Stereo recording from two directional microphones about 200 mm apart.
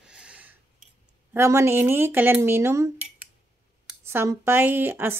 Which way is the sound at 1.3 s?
15° right (ahead or behind).